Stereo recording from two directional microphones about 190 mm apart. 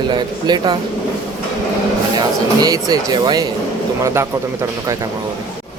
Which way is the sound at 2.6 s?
20° right (ahead or behind).